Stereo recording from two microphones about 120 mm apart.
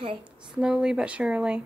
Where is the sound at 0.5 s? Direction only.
5° right (ahead or behind).